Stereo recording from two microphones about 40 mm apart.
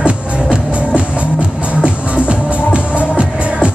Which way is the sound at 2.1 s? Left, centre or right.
Right.